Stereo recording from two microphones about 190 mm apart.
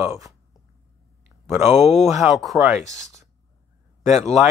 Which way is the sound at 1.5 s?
10° right (ahead or behind).